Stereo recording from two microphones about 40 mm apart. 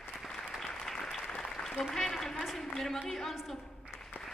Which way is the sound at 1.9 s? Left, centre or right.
Centre.